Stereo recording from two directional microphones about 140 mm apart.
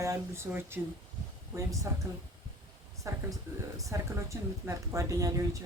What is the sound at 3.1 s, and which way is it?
Speech, 20° right (ahead or behind).